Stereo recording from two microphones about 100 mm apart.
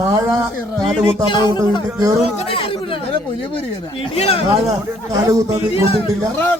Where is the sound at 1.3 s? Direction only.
55° left (ahead or behind).